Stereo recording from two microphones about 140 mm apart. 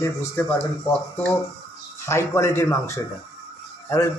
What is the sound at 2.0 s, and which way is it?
Speech, 20° left (ahead or behind).